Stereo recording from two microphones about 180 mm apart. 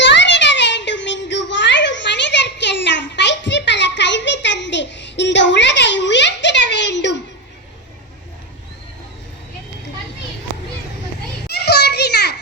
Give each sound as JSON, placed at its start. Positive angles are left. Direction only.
{"t": 0.0, "sound": "child singing", "side_deg": 80}
{"t": 11.4, "sound": "children playing", "side_deg": 65}